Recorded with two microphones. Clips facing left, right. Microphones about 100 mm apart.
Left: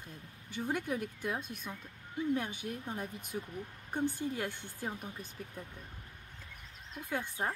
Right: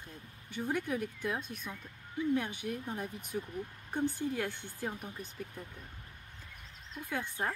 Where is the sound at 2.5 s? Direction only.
55° right (ahead or behind).